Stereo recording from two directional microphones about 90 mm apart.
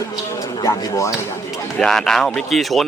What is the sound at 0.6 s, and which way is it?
Speech, 35° left (ahead or behind).